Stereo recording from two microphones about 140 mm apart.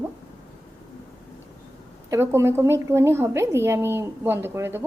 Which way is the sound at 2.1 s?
20° right (ahead or behind).